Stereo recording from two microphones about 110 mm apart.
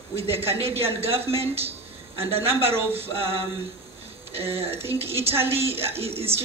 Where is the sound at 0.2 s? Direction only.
65° right (ahead or behind).